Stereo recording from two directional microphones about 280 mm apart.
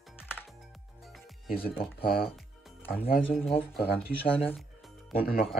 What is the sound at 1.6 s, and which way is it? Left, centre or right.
Speech, centre.